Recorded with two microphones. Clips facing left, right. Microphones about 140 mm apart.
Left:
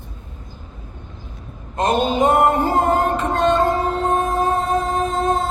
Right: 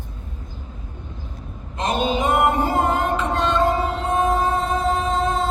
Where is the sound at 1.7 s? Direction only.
50° left (ahead or behind).